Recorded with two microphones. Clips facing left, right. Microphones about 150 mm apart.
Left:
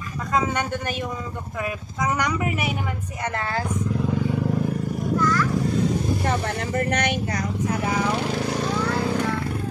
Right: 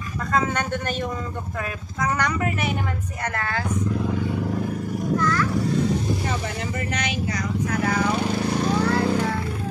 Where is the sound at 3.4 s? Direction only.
30° left (ahead or behind).